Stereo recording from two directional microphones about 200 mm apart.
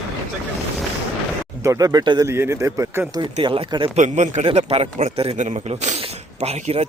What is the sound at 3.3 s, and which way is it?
Speech, 25° right (ahead or behind).